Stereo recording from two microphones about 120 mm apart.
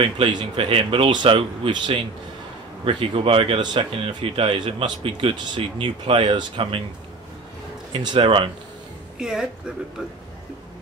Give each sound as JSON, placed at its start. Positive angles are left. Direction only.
{"t": 0.0, "sound": "speech", "side_deg": -45}
{"t": 7.9, "sound": "speech", "side_deg": -40}
{"t": 9.2, "sound": "speech", "side_deg": -5}